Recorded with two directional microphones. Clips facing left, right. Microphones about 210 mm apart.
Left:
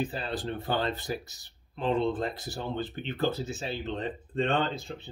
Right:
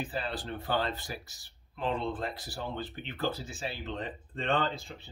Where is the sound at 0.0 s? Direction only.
20° left (ahead or behind).